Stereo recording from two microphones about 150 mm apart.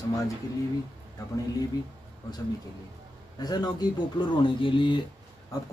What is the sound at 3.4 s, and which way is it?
Speech, 25° left (ahead or behind).